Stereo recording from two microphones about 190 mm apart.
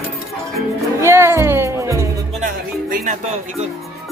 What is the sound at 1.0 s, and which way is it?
Music, 15° right (ahead or behind).